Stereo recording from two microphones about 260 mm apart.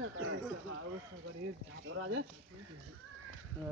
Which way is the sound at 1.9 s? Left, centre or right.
Right.